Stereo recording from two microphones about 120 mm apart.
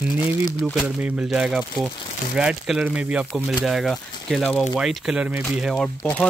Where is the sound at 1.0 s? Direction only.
10° right (ahead or behind); by 4.7 s 5° left (ahead or behind).